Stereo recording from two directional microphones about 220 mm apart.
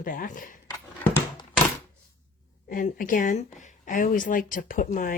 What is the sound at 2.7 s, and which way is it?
Speech, 40° left (ahead or behind).